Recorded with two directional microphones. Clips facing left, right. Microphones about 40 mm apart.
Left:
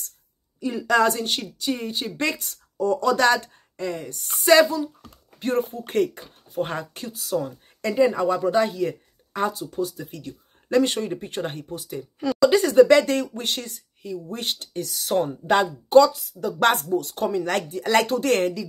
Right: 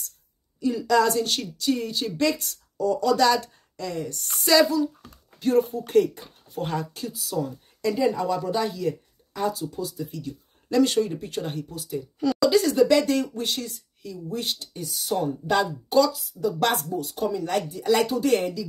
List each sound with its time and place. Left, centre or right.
0.6 s a woman's voice: left
2.1 s speech: left
7.3 s speech: left
10.8 s speech: left
14.7 s speech: left
15.2 s speech: left